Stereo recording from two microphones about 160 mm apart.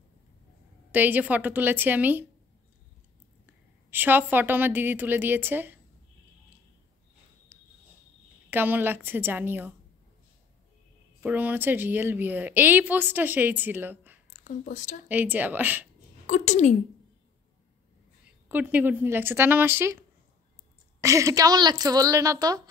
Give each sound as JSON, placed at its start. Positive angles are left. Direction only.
{"t": 0.9, "sound": "a woman's voice", "side_deg": -10}
{"t": 3.4, "sound": "a woman's voice", "side_deg": -10}
{"t": 7.5, "sound": "cricket", "side_deg": -15}
{"t": 8.5, "sound": "a woman's voice", "side_deg": -10}
{"t": 11.1, "sound": "a woman's voice", "side_deg": -10}
{"t": 14.4, "sound": "speech", "side_deg": 50}
{"t": 15.0, "sound": "a woman's voice", "side_deg": -10}
{"t": 16.3, "sound": "a woman's voice", "side_deg": 50}
{"t": 18.5, "sound": "a woman's voice", "side_deg": -10}